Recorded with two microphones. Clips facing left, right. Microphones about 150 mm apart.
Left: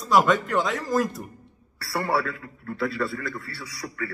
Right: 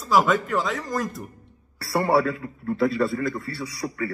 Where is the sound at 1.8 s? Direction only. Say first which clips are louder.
Right 5 dB; 25° right (ahead or behind).